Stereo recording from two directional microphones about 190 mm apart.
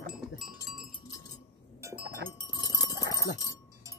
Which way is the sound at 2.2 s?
20° left (ahead or behind).